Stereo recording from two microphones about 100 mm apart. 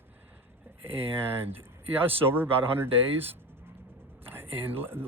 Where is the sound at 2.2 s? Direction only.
20° right (ahead or behind).